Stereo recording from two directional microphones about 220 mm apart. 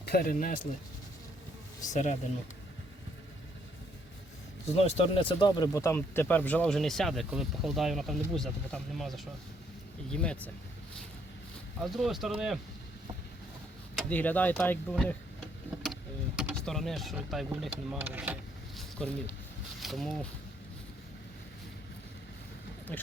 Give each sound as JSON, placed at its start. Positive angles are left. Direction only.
{"t": 0.0, "sound": "speech", "side_deg": 45}
{"t": 1.9, "sound": "speech", "side_deg": 30}
{"t": 4.7, "sound": "speech", "side_deg": 30}
{"t": 11.8, "sound": "speech", "side_deg": 0}
{"t": 13.9, "sound": "speech", "side_deg": 5}
{"t": 15.8, "sound": "vehicle", "side_deg": 0}
{"t": 17.9, "sound": "speech", "side_deg": -10}
{"t": 18.8, "sound": "speech", "side_deg": 5}